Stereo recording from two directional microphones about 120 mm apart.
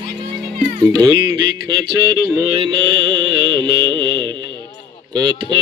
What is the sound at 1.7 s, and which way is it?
Mantra, 35° right (ahead or behind).